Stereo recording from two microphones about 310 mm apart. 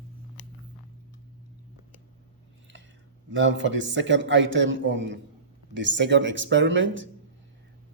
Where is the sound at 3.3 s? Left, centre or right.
Right.